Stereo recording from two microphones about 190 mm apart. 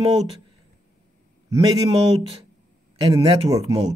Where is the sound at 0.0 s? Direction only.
30° right (ahead or behind).